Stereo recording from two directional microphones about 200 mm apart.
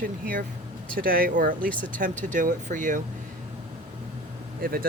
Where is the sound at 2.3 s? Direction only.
40° right (ahead or behind).